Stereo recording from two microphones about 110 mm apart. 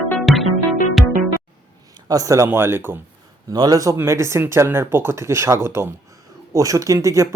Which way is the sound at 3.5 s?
35° right (ahead or behind).